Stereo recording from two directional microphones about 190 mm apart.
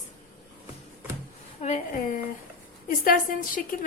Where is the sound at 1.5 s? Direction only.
40° left (ahead or behind).